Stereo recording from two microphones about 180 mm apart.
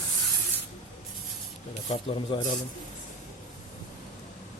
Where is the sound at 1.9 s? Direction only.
30° left (ahead or behind).